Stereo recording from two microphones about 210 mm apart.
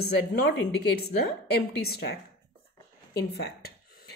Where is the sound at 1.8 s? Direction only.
45° left (ahead or behind).